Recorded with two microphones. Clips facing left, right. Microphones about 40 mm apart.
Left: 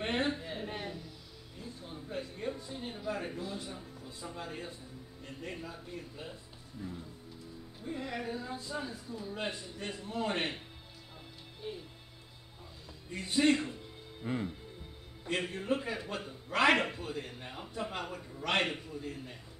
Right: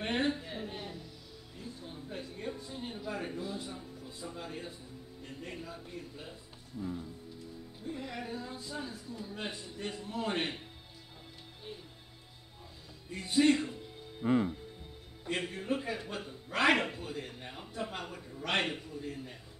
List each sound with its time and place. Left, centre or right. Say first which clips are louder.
0.0 s a sound: right 1 dB; centre
1.8 s a sound: left 4 dB; centre
5.2 s a man's voice: left 1 dB; centre
7.8 s a man's voice: left 2 dB; centre
11.7 s music: left 5 dB; centre
13.1 s a man's voice: right 1 dB; centre
14.2 s music: right 8 dB; right
15.2 s a man's voice: left 1 dB; centre